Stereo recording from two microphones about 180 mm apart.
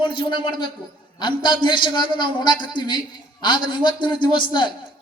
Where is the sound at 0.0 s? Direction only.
25° left (ahead or behind).